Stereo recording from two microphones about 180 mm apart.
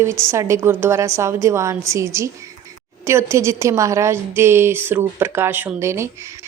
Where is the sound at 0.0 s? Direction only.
15° right (ahead or behind).